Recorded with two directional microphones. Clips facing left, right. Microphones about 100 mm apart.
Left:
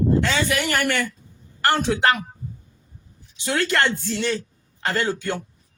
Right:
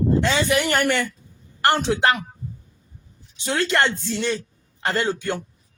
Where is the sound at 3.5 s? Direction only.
20° right (ahead or behind).